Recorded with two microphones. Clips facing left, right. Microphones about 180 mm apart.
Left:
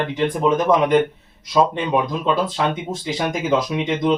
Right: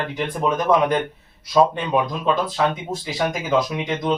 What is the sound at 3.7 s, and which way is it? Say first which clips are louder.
Speech: left 4 dB; 20° left (ahead or behind).